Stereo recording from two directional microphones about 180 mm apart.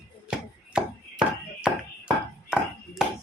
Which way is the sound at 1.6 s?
5° right (ahead or behind).